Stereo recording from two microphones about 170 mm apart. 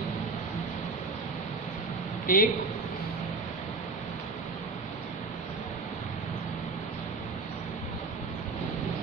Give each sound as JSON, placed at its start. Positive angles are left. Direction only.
{"t": 2.2, "sound": "a man's voice", "side_deg": 55}